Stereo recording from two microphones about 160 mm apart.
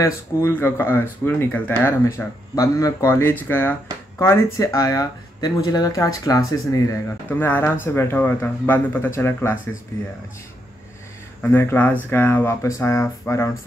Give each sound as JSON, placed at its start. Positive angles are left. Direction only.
{"t": 0.0, "sound": "speech", "side_deg": 15}
{"t": 11.4, "sound": "speech", "side_deg": 15}